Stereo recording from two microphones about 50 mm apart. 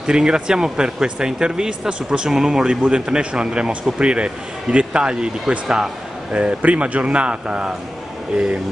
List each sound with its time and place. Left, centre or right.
0.0 s speech: centre